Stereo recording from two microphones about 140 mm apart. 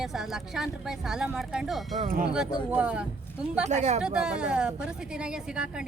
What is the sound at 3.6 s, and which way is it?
Speech, 55° right (ahead or behind).